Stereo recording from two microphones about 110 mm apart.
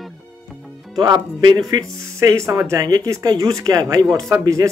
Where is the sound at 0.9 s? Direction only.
40° right (ahead or behind).